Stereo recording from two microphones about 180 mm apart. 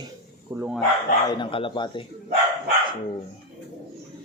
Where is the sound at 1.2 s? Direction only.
25° left (ahead or behind).